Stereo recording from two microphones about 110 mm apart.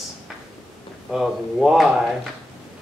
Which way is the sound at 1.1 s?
5° right (ahead or behind).